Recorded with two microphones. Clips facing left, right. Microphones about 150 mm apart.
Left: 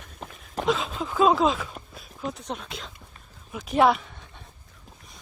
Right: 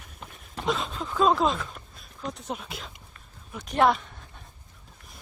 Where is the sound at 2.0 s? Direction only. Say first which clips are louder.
Left 3 dB; centre (ahead or behind).